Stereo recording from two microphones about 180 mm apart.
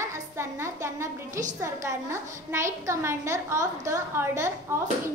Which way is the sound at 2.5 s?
15° right (ahead or behind).